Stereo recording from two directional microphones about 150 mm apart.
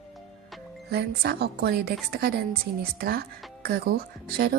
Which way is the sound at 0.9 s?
90° right.